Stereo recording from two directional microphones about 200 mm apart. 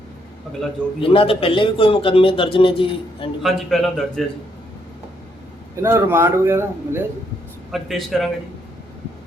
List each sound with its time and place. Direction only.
1.0 s a man's voice: 25° left (ahead or behind)
3.4 s a man's voice: centre (ahead or behind)
5.8 s a man's voice: 10° right (ahead or behind)
7.7 s a man's voice: centre (ahead or behind)